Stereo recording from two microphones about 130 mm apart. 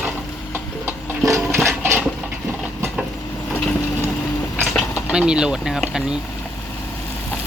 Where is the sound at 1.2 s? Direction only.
30° right (ahead or behind).